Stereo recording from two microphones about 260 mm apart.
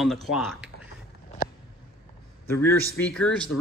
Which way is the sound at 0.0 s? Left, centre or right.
Centre.